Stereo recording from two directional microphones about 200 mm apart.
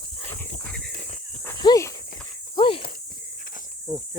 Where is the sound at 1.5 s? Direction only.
15° left (ahead or behind).